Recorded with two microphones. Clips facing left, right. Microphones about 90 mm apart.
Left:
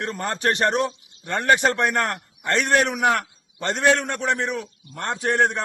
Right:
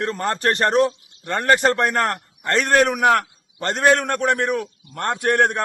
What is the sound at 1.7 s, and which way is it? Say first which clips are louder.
A man's voice: right 2 dB; 40° right (ahead or behind).